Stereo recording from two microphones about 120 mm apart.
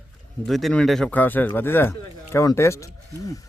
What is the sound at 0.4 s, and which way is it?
Speech, centre (ahead or behind).